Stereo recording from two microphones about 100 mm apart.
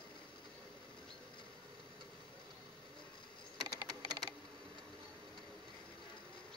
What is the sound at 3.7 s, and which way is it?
Typing, 40° right (ahead or behind).